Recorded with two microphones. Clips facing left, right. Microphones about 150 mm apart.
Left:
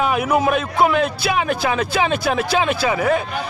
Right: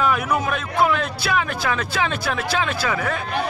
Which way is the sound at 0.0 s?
20° left (ahead or behind).